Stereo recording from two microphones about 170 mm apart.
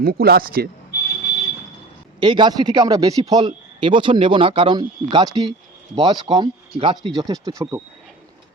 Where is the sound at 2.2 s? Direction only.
25° right (ahead or behind).